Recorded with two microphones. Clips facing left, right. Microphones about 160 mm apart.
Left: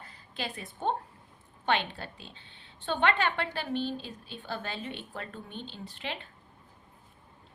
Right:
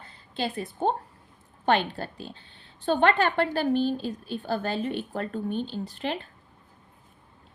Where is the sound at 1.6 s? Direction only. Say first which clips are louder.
Right 6 dB; 40° right (ahead or behind).